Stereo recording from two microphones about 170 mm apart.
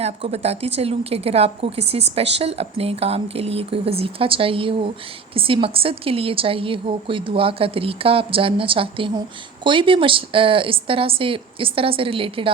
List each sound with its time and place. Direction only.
0.0 s a woman's voice: 35° right (ahead or behind)